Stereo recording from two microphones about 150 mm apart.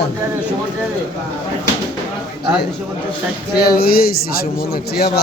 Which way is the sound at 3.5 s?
90° left.